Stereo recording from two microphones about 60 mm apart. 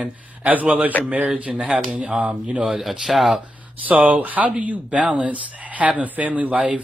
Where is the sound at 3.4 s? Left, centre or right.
Right.